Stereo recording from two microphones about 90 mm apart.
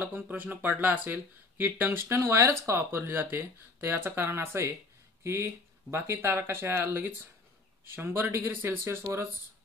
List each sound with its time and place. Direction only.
0.0 s speech: 20° right (ahead or behind)